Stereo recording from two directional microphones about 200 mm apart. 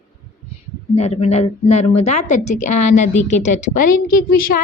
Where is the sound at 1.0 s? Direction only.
30° left (ahead or behind).